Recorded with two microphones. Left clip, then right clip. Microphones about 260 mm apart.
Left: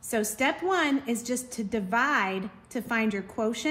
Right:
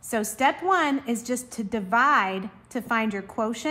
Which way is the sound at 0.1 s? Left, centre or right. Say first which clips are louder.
Right 4 dB; centre.